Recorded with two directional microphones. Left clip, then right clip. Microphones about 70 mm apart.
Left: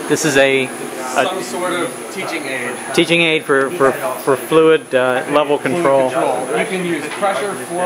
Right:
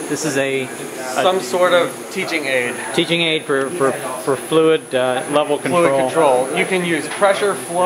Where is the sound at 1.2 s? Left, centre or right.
Left.